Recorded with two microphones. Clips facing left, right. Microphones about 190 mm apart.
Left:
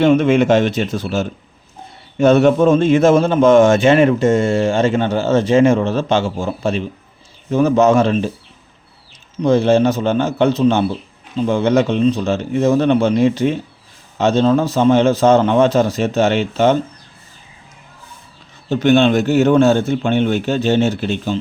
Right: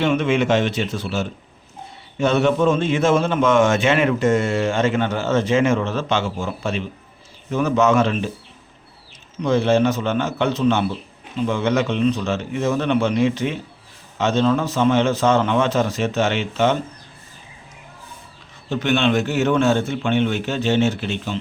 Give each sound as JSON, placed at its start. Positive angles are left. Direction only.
{"t": 0.0, "sound": "a man's voice", "side_deg": 40}
{"t": 9.4, "sound": "speech", "side_deg": 35}
{"t": 18.7, "sound": "speech", "side_deg": 35}